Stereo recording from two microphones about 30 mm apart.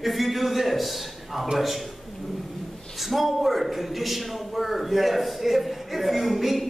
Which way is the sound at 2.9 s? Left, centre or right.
Centre.